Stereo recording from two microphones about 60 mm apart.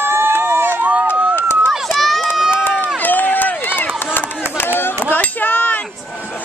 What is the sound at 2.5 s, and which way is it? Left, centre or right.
Run, left.